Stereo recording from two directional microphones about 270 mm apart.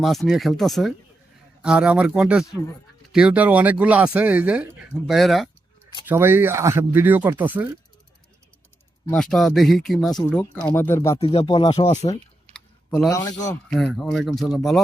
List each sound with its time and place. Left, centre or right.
0.0 s speech: centre
9.0 s speech: centre
11.2 s speech: left
13.5 s speech: centre